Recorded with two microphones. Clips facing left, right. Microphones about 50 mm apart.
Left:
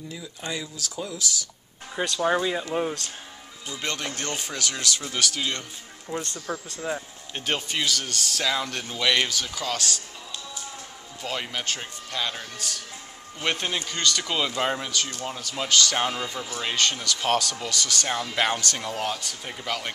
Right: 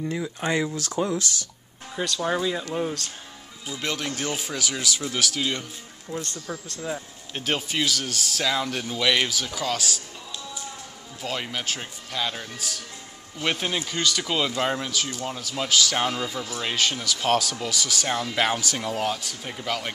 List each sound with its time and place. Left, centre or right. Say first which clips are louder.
0.1 s speech: right 6 dB; right
2.1 s speech: left 2 dB; centre
3.6 s speech: right 2 dB; centre
6.3 s speech: left 2 dB; centre
7.3 s speech: right 2 dB; centre
11.2 s speech: right 1 dB; centre